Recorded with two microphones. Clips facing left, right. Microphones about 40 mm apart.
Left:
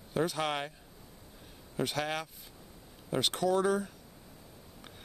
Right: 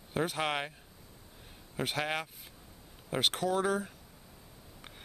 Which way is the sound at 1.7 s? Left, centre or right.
Centre.